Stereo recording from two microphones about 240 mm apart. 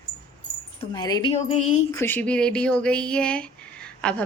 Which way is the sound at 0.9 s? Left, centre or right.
Centre.